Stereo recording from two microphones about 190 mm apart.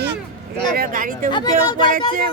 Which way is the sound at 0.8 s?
45° right (ahead or behind).